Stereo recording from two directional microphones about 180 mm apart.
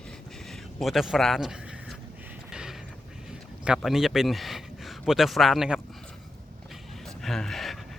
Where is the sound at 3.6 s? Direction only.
5° right (ahead or behind).